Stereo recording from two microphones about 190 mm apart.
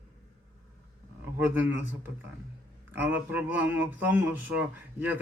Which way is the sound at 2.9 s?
10° right (ahead or behind).